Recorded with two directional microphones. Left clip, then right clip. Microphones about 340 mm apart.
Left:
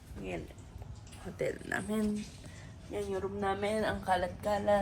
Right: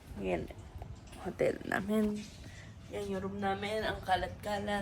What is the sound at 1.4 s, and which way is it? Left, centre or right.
Speech, right.